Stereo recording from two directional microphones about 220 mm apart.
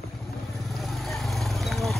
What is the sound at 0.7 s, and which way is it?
Vehicle, centre (ahead or behind).